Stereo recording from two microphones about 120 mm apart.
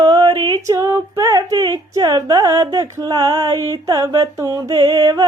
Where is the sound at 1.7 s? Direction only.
35° right (ahead or behind).